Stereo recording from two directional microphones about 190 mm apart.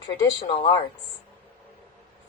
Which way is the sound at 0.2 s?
30° left (ahead or behind).